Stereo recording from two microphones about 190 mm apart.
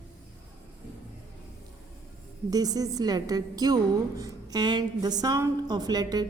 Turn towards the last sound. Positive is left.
turn(degrees=-20)  # may be behind; listen again after turning